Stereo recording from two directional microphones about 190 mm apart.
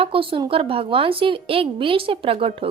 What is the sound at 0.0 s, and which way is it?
Speech, 30° right (ahead or behind).